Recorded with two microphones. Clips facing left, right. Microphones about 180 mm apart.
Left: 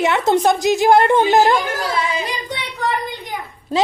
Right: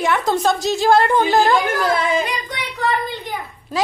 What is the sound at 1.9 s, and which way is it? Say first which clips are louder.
Speech: right 4 dB; 50° right (ahead or behind).